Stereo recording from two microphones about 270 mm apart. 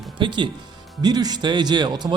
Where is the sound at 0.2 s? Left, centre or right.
Centre.